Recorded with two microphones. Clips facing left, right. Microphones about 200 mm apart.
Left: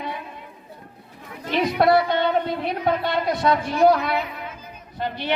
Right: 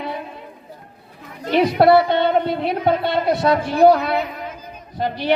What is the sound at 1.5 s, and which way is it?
A man's voice, 30° right (ahead or behind).